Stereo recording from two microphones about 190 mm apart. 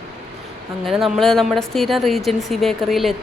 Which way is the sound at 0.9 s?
Centre (ahead or behind).